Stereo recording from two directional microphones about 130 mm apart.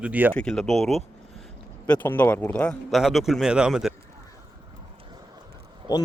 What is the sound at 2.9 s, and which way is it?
A man's voice, centre (ahead or behind).